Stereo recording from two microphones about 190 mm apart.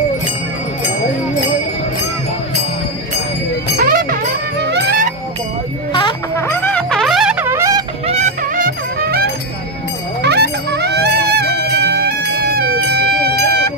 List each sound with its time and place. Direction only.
3.7 s music: 50° right (ahead or behind)
6.3 s music: 15° left (ahead or behind); by 7.8 s 15° right (ahead or behind)
8.1 s music: 40° right (ahead or behind); by 13.6 s 55° right (ahead or behind)